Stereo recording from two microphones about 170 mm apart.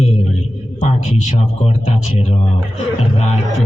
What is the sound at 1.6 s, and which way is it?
Speech, 40° left (ahead or behind).